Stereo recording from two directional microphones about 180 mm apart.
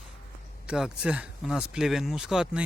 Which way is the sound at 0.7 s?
5° right (ahead or behind).